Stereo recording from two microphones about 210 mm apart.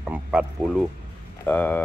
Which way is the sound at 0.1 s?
5° right (ahead or behind).